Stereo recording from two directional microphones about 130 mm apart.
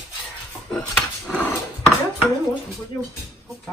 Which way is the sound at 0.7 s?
10° left (ahead or behind).